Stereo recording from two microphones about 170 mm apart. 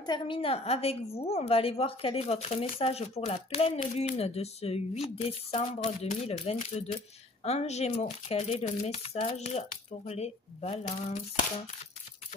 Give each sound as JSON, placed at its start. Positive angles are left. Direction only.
{"t": 0.0, "sound": "speech", "side_deg": 30}